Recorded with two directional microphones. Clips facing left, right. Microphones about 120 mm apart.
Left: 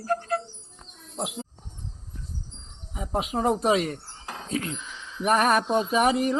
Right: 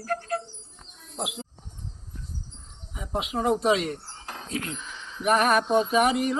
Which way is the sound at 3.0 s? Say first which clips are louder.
Left 2 dB; 35° left (ahead or behind).